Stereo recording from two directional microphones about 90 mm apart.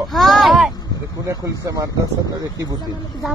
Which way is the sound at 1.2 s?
40° right (ahead or behind).